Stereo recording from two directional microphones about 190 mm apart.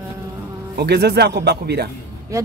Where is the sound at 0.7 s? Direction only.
60° right (ahead or behind).